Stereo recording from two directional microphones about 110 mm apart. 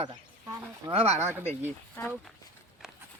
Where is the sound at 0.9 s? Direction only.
65° right (ahead or behind).